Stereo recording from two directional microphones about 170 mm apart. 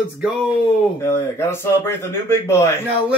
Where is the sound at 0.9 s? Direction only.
15° left (ahead or behind).